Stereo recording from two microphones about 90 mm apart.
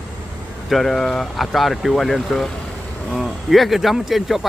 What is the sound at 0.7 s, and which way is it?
Speech, centre (ahead or behind).